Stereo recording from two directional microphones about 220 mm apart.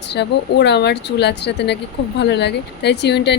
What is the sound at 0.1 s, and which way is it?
Speech, 50° left (ahead or behind).